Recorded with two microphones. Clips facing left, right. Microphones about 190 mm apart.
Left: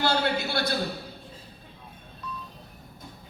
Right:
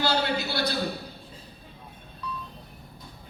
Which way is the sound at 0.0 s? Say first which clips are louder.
Left 1 dB; 50° left (ahead or behind).